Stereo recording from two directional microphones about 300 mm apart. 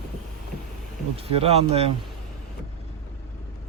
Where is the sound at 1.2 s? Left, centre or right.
Centre.